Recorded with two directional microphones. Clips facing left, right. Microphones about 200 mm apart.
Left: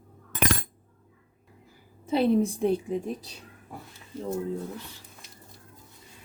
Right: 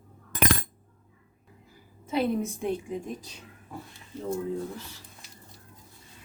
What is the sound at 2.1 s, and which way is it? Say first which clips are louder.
A woman's voice: left 4 dB; 30° left (ahead or behind).